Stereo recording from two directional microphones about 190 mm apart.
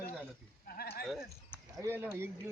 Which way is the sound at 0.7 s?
55° left (ahead or behind).